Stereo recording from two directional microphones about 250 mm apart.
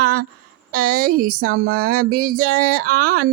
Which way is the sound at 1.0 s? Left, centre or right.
Right.